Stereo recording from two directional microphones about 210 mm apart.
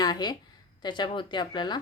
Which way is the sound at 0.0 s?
20° left (ahead or behind).